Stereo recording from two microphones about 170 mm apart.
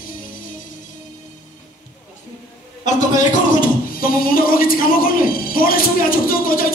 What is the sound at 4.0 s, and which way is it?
Speech, 55° left (ahead or behind).